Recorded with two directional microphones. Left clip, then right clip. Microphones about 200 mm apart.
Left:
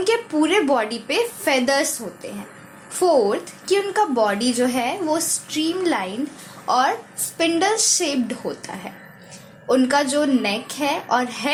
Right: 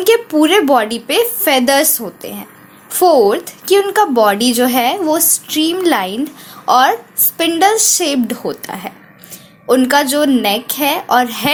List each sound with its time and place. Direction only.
0.0 s a woman's voice: 35° right (ahead or behind)